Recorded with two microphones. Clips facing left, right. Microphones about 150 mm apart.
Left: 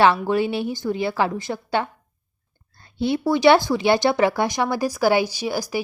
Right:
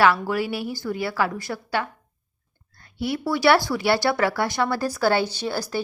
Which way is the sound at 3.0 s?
20° left (ahead or behind).